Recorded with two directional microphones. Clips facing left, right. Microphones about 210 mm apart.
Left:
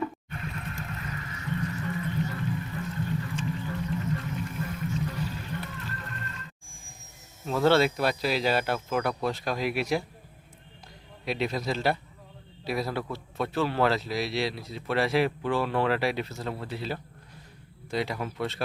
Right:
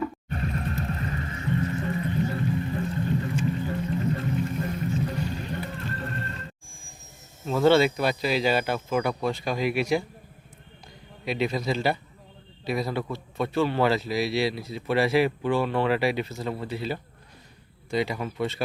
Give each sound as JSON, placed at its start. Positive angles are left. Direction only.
{"t": 0.3, "sound": "music", "side_deg": -40}
{"t": 7.4, "sound": "a man's voice", "side_deg": 0}
{"t": 11.3, "sound": "a man's voice", "side_deg": 0}